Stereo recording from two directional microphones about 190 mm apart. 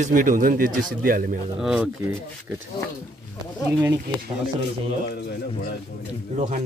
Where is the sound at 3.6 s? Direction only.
15° right (ahead or behind).